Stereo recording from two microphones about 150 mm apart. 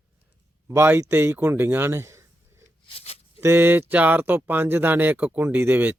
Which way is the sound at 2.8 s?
40° left (ahead or behind).